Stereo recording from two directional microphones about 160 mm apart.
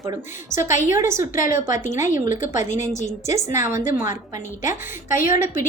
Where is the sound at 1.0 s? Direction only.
15° right (ahead or behind).